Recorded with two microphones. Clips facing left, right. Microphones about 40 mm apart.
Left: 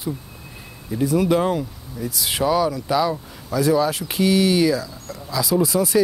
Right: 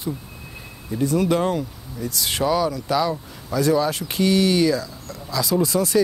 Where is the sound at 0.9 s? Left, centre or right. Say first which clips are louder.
Left 1 dB; centre.